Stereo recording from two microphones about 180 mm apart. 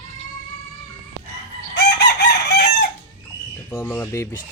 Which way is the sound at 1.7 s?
70° left (ahead or behind).